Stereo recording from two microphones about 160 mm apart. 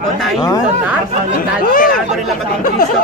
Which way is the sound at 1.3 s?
60° left (ahead or behind).